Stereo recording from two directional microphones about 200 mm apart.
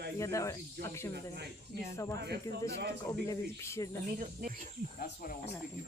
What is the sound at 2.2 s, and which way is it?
Speech, 55° right (ahead or behind).